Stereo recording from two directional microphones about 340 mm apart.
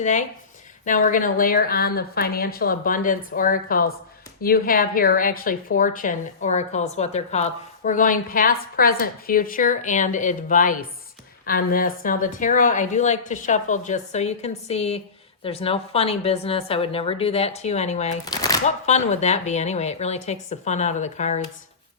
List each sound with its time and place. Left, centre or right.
0.0 s speech: left